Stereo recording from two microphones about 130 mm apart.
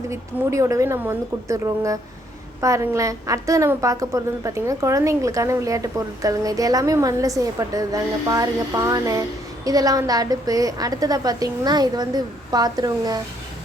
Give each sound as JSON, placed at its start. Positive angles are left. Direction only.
{"t": 0.1, "sound": "a woman's voice", "side_deg": -25}